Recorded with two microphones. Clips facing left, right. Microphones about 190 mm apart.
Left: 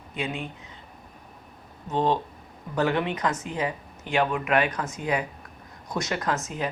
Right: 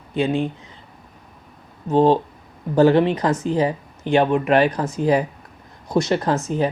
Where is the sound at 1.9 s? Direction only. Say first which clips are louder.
Right 9 dB; 35° right (ahead or behind).